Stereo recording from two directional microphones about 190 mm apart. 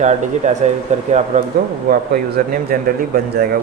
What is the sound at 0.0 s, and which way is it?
A man's voice, 35° right (ahead or behind).